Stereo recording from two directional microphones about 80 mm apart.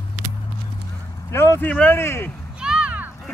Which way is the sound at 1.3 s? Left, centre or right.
Left.